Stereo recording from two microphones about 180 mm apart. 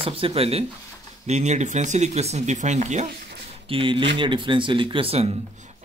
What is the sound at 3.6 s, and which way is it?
Speech, 30° right (ahead or behind).